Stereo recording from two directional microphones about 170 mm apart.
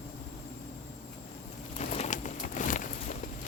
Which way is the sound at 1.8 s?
40° left (ahead or behind).